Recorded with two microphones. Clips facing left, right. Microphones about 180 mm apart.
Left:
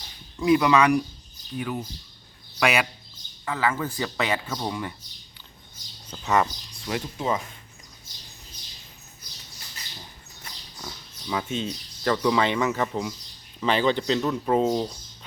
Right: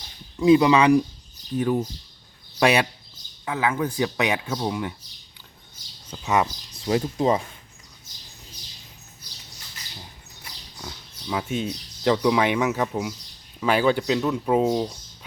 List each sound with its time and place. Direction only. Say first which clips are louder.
0.3 s speech: right 3 dB; 25° right (ahead or behind)
3.4 s speech: right 2 dB; 15° right (ahead or behind)
6.1 s speech: even; 10° right (ahead or behind)
6.8 s speech: right 6 dB; 35° right (ahead or behind)
10.4 s speech: right 1 dB; 5° right (ahead or behind)